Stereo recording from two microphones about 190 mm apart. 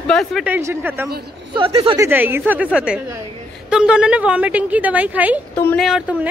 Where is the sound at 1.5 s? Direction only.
25° right (ahead or behind).